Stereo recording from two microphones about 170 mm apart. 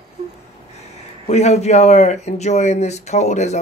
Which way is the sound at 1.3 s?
40° left (ahead or behind).